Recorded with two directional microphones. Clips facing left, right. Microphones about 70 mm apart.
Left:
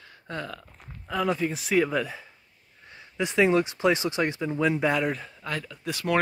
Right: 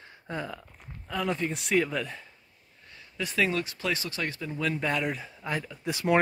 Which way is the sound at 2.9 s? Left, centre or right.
Left.